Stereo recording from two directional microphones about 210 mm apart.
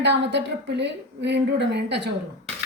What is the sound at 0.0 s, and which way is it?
A woman's voice, 55° right (ahead or behind).